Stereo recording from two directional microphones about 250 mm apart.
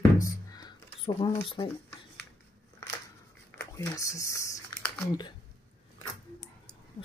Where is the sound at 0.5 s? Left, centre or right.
Centre.